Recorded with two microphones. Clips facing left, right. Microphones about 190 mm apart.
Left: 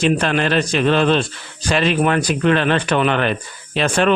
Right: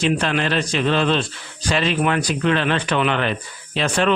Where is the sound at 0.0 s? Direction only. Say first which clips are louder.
Left 3 dB; 50° left (ahead or behind).